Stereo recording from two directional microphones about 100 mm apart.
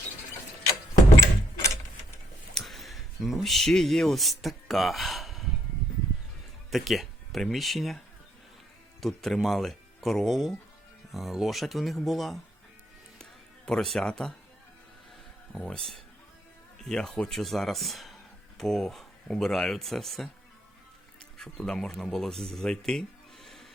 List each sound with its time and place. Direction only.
1.2 s a sound: 30° left (ahead or behind)
2.6 s speech: centre (ahead or behind)
6.7 s speech: centre (ahead or behind)
13.7 s speech: 5° left (ahead or behind)
15.5 s speech: 5° left (ahead or behind)
21.3 s speech: 5° left (ahead or behind)